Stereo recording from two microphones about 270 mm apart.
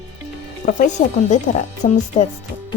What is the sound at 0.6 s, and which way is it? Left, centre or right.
A woman's voice, left.